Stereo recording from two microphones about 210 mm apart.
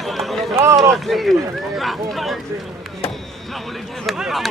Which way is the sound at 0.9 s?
Centre (ahead or behind).